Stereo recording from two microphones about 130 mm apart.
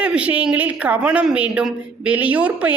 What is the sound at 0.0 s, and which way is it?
A woman's voice, 10° right (ahead or behind).